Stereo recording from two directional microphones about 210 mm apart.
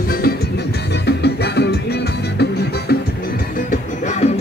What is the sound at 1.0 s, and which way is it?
Music, 50° left (ahead or behind).